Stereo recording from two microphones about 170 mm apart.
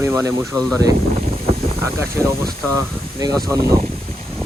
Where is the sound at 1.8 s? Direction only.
15° right (ahead or behind).